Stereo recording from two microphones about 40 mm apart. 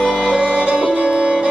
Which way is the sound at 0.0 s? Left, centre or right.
Right.